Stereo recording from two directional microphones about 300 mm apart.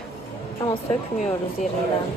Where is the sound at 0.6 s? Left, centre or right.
Centre.